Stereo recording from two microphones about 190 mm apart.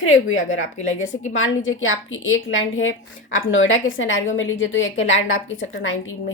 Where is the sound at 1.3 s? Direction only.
90° left.